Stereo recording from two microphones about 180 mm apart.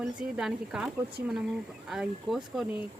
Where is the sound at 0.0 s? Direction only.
5° right (ahead or behind).